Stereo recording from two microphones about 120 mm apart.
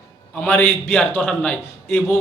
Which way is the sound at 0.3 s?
15° left (ahead or behind).